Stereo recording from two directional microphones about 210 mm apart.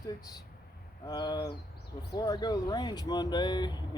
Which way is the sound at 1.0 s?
20° left (ahead or behind).